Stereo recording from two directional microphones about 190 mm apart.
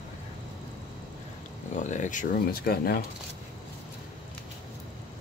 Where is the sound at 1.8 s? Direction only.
40° left (ahead or behind).